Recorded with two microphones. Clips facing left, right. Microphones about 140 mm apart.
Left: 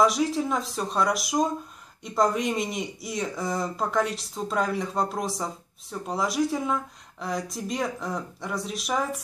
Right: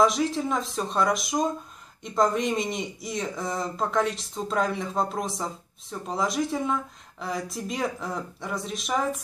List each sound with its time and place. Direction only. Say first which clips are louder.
0.0 s speech: even; centre (ahead or behind)